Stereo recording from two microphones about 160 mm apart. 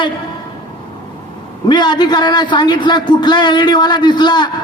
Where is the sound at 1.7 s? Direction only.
25° left (ahead or behind).